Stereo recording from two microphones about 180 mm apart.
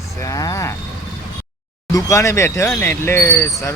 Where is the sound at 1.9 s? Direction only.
15° left (ahead or behind).